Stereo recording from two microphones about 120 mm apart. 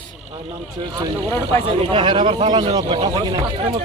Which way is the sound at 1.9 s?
45° right (ahead or behind).